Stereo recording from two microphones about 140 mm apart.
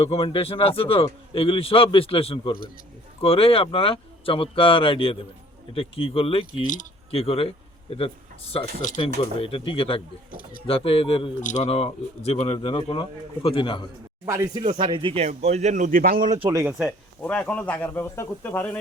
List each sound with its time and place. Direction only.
0.0 s speech: 45° left (ahead or behind)
8.8 s speech: 65° left (ahead or behind)
9.4 s speech: 40° left (ahead or behind)
11.4 s speech: 55° left (ahead or behind); by 13.8 s 35° left (ahead or behind)
14.3 s speech: 25° right (ahead or behind)
14.8 s speech: 40° right (ahead or behind)
15.3 s speech: 50° right (ahead or behind); by 16.4 s 80° right
16.6 s speech: 5° right (ahead or behind)
17.2 s speech: 10° left (ahead or behind)